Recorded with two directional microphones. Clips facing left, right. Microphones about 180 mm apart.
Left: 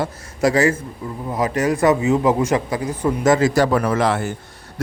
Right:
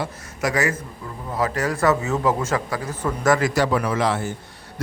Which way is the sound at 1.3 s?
20° left (ahead or behind).